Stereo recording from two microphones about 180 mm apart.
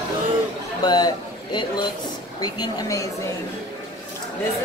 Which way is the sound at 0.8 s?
25° left (ahead or behind).